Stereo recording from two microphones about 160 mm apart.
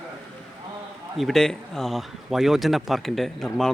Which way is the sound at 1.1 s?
Centre (ahead or behind).